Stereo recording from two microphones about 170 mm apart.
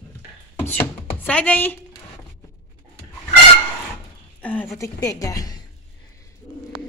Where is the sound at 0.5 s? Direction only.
10° left (ahead or behind).